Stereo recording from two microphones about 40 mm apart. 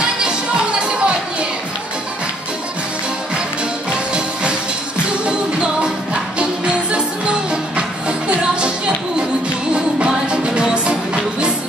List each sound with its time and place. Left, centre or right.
0.7 s music: right
3.9 s music: right
8.3 s music: right
10.0 s music: right